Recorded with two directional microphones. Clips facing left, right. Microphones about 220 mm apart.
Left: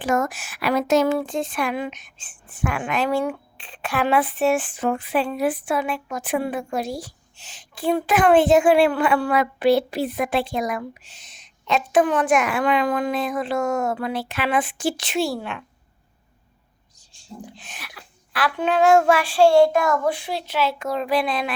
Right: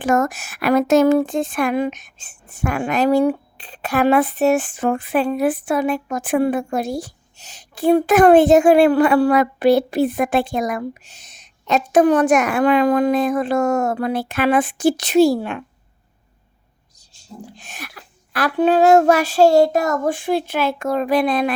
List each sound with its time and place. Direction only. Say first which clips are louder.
0.0 s speech: right 4 dB; 45° right (ahead or behind)
17.6 s speech: right 5 dB; 45° right (ahead or behind)